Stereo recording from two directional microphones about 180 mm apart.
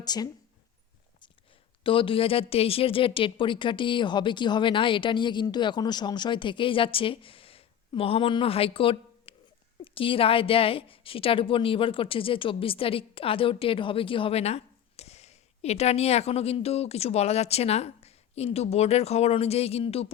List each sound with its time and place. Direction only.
0.0 s speech: 20° left (ahead or behind)
1.8 s a woman's voice: 30° left (ahead or behind)